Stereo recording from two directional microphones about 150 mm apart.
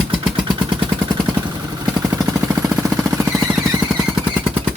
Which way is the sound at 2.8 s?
20° right (ahead or behind).